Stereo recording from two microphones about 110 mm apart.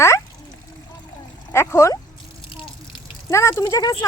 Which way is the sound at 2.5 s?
50° left (ahead or behind).